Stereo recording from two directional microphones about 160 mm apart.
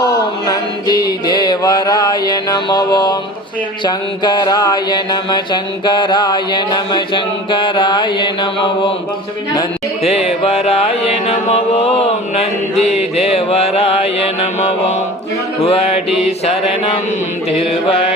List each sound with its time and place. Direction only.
0.0 s mantra: 25° left (ahead or behind)
10.0 s music: 40° left (ahead or behind)
15.6 s music: 40° left (ahead or behind)